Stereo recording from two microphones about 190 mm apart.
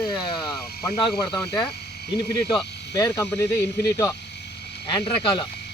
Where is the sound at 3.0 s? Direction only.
15° left (ahead or behind).